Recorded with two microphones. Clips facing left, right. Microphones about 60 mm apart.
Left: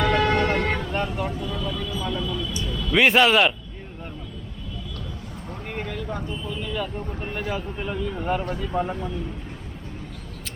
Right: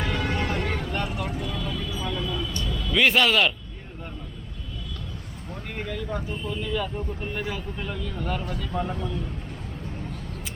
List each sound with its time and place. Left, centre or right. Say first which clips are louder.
0.0 s vehicle: left 7 dB; left
0.9 s vehicle: left 3 dB; centre
1.4 s vehicle: left 1 dB; right
1.6 s a sound: left 2 dB; left
2.2 s vehicle: left 1 dB; right
2.9 s speech: left 3 dB; centre
5.7 s speech: even; centre
7.5 s speech: left 4 dB; centre